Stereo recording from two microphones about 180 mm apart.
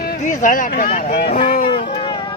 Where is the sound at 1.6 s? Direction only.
30° left (ahead or behind).